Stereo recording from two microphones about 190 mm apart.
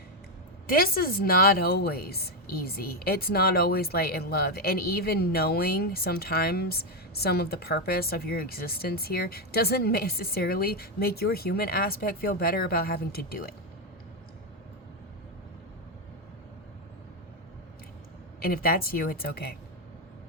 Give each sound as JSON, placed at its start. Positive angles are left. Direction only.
{"t": 0.7, "sound": "a woman's voice", "side_deg": 50}
{"t": 18.3, "sound": "a woman's voice", "side_deg": 50}